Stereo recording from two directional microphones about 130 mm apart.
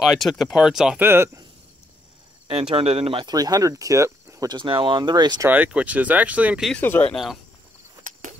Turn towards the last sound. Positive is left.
turn(degrees=0)  # may be behind; listen again after turning